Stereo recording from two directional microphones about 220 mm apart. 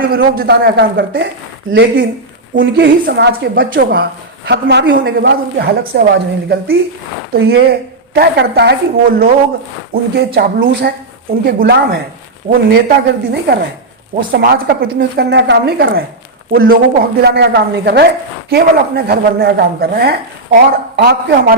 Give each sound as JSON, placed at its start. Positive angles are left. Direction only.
{"t": 0.1, "sound": "a woman's voice", "side_deg": -45}